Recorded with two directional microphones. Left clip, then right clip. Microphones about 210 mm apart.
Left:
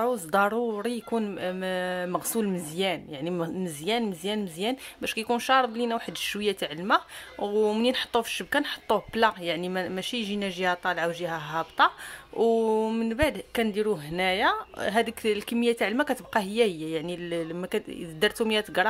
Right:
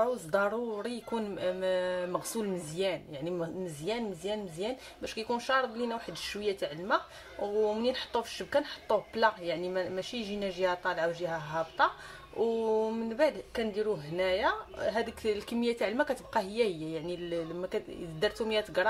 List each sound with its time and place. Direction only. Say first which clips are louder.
0.0 s speech: left 5 dB; 40° left (ahead or behind)